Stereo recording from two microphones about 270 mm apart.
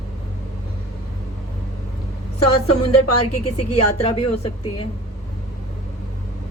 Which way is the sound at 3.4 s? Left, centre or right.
Left.